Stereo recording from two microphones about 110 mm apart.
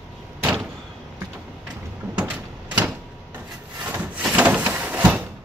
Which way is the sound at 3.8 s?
15° right (ahead or behind).